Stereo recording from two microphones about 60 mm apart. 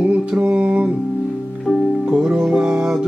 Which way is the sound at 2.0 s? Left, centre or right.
Centre.